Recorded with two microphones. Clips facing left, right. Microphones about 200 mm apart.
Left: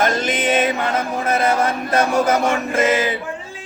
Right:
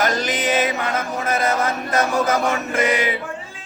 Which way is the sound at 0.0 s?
25° left (ahead or behind).